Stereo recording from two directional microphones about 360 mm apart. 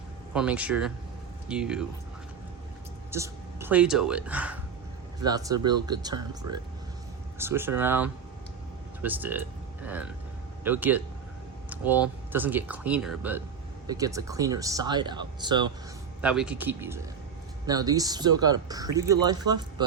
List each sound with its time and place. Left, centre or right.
0.3 s speech: centre
3.1 s a man's voice: centre